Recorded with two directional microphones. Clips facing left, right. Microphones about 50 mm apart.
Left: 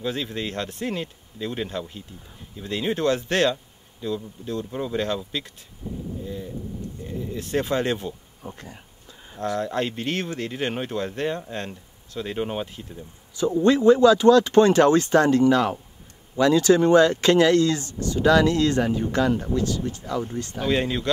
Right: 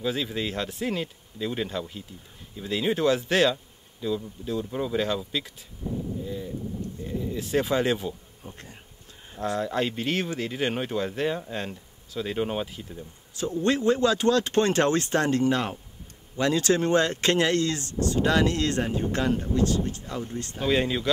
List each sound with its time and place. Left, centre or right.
0.0 s speech: centre
8.4 s speech: centre
9.6 s speech: centre
14.0 s speech: right
20.6 s speech: centre